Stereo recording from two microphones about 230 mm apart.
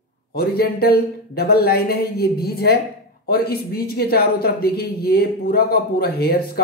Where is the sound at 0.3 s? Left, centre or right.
Left.